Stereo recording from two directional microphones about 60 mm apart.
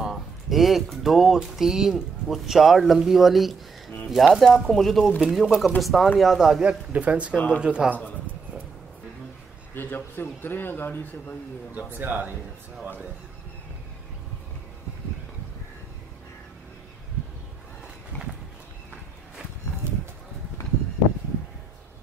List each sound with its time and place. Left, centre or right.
0.0 s a sound: centre
0.8 s speech: centre
6.9 s speech: right
7.3 s speech: left
7.6 s a man's voice: centre
9.8 s a man's voice: left
12.0 s speech: right